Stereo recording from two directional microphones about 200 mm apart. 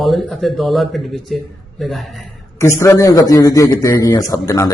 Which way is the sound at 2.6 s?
15° left (ahead or behind).